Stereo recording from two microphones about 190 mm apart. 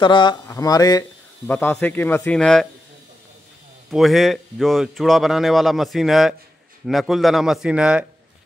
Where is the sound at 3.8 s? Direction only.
Centre (ahead or behind).